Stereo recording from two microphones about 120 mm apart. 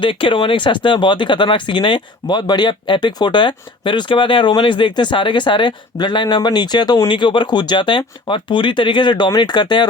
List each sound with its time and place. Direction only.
0.0 s speech: 45° left (ahead or behind)